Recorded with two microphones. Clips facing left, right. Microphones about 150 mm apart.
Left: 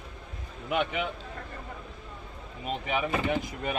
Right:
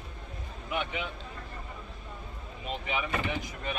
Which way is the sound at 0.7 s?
65° left (ahead or behind).